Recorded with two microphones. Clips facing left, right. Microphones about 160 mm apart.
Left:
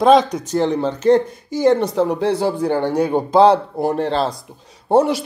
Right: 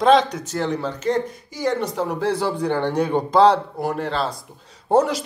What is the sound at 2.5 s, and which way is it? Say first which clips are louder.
Speech: left 3 dB; 10° left (ahead or behind).